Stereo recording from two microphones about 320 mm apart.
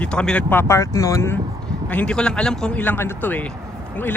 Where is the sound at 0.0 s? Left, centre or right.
Centre.